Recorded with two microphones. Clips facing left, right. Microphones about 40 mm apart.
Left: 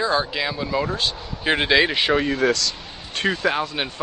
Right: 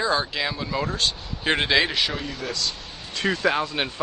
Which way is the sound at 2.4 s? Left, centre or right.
Left.